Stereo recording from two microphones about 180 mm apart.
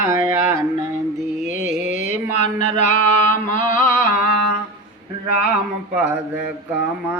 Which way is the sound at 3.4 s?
50° left (ahead or behind).